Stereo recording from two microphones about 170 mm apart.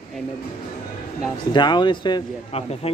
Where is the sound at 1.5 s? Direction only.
25° left (ahead or behind).